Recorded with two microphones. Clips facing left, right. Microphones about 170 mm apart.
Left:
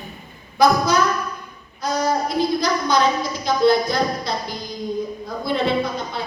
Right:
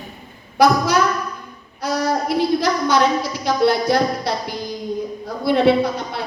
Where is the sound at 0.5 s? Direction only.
70° right (ahead or behind).